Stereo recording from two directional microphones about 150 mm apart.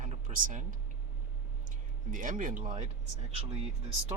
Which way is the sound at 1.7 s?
60° right (ahead or behind).